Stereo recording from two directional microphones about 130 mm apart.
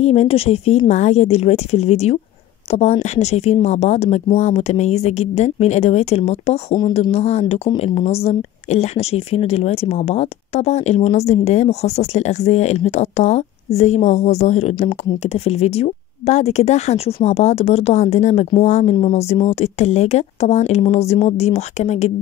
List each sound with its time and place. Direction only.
0.0 s speech: 50° left (ahead or behind)